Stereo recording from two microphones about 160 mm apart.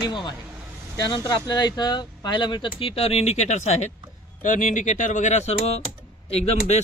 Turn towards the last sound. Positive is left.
turn(degrees=40)  # may be behind; listen again after turning